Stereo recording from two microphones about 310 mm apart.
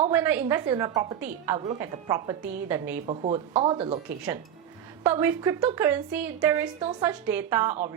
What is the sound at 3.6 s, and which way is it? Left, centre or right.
Speech, centre.